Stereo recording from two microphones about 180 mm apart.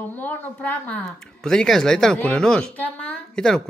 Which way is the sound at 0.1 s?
10° left (ahead or behind).